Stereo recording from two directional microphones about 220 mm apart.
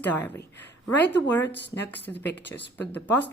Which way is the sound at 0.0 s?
10° left (ahead or behind).